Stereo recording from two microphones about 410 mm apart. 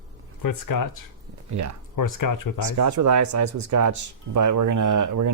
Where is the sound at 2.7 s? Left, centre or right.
Right.